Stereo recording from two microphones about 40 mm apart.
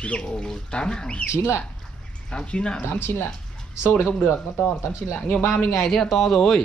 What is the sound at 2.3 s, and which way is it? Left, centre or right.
Speech, left.